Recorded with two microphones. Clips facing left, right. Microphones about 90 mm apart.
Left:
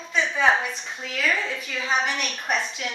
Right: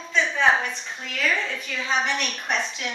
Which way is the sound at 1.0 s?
5° left (ahead or behind).